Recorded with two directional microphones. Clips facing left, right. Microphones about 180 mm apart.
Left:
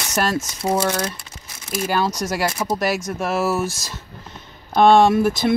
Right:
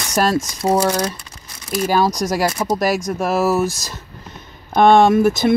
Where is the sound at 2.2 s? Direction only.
40° right (ahead or behind).